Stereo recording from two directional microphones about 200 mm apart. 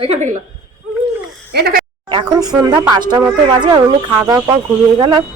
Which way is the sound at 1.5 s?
50° right (ahead or behind).